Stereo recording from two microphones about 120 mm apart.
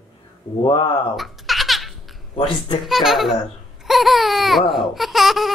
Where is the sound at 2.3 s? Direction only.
55° left (ahead or behind).